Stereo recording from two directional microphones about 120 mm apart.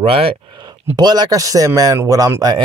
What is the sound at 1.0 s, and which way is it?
Speech, 35° right (ahead or behind).